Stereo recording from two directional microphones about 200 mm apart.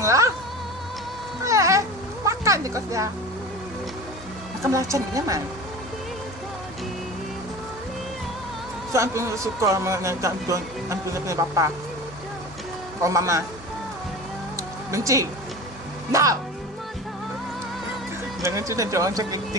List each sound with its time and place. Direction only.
0.0 s music: 15° right (ahead or behind)
1.4 s cat: 15° right (ahead or behind)
4.6 s speech: 15° right (ahead or behind)
8.9 s speech: 15° right (ahead or behind)
13.0 s speech: 15° right (ahead or behind)
14.9 s speech: 15° right (ahead or behind)
18.4 s speech: 15° right (ahead or behind)